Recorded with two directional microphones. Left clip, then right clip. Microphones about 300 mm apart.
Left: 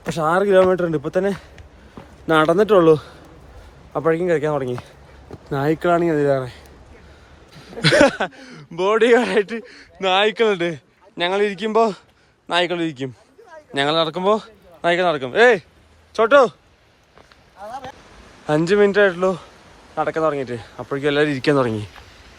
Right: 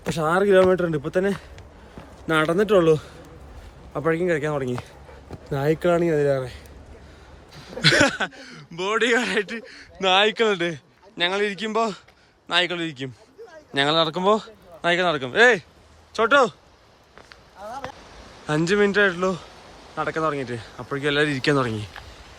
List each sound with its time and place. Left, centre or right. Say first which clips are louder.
0.0 s speech: left 3 dB; centre
3.9 s speech: left 4 dB; centre
5.5 s speech: left 3 dB; centre
7.5 s speech: left 2 dB; centre
18.4 s speech: left 5 dB; centre